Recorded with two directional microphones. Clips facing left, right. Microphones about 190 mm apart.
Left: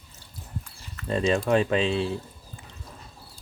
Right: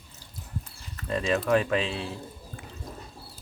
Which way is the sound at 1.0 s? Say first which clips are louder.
Left 2 dB; 25° left (ahead or behind).